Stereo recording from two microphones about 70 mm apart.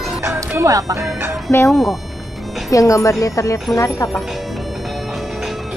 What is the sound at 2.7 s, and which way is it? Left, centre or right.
Speech, left.